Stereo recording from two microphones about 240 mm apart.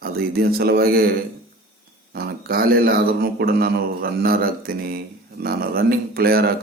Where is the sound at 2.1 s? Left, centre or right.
Right.